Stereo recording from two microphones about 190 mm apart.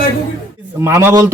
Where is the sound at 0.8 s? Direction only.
15° right (ahead or behind).